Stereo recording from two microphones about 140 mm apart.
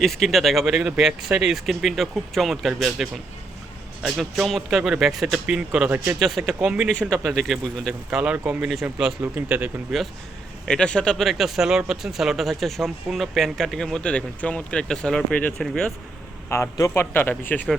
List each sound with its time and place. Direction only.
0.0 s speech: centre (ahead or behind)
8.2 s speech: 10° right (ahead or behind)
10.7 s speech: 5° left (ahead or behind)
16.5 s speech: 20° left (ahead or behind)